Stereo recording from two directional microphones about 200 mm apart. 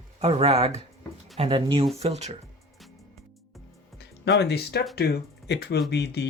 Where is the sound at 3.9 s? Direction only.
60° left (ahead or behind).